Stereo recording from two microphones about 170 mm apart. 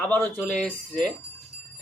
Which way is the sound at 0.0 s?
10° left (ahead or behind).